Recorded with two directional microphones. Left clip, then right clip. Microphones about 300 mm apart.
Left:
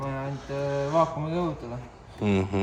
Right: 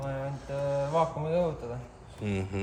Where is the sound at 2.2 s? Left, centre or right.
Centre.